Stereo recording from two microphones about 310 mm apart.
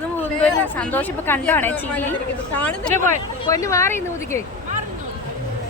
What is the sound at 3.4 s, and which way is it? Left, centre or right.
Speech, centre.